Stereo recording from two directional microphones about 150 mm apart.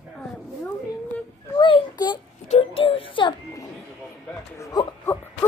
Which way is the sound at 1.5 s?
35° left (ahead or behind).